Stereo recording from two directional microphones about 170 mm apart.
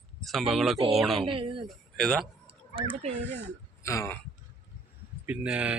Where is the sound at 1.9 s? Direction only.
Centre (ahead or behind).